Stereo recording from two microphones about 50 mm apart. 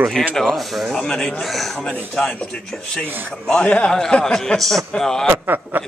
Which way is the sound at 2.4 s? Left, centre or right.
Centre.